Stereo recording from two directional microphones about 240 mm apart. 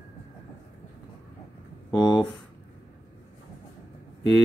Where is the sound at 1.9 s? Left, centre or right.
Centre.